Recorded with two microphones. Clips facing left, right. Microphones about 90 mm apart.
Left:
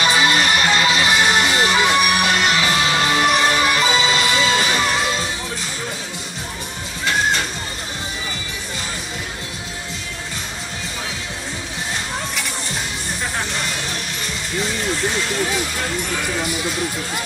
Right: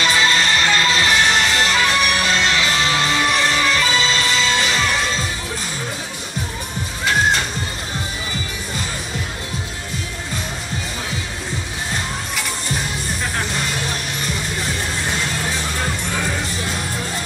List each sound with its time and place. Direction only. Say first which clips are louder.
0.0 s music: left 1 dB; 15° left (ahead or behind)